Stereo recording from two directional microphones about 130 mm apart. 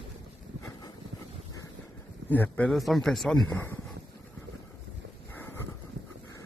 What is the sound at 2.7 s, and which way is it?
Speech, centre (ahead or behind).